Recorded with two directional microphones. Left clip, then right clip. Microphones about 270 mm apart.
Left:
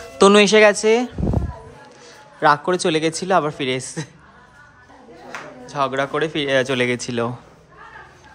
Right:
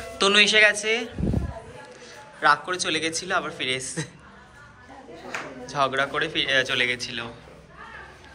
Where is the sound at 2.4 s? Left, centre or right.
Left.